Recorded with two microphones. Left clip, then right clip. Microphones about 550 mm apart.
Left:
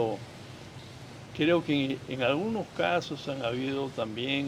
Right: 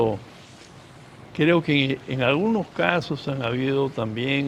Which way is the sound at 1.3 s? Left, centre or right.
Right.